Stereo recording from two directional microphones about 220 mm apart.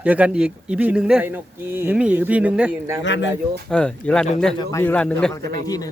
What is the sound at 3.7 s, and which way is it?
A man's voice, 5° left (ahead or behind).